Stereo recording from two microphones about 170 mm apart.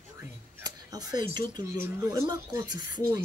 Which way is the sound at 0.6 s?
20° right (ahead or behind).